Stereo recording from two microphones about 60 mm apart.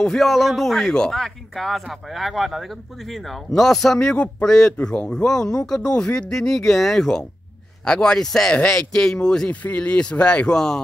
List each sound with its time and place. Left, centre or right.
0.0 s a man's voice: centre
4.1 s speech: centre
9.5 s speech: left